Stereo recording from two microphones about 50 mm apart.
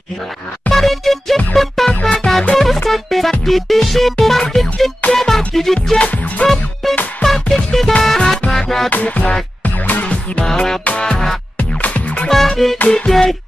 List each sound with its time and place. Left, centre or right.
0.7 s music: centre
5.9 s music: left
6.4 s music: centre
8.9 s music: left
10.4 s music: centre
10.8 s music: left
11.1 s music: centre
11.5 s music: left
12.3 s music: centre
12.9 s music: centre